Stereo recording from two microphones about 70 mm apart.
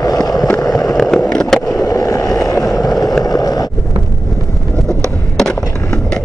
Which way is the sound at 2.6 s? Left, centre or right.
Left.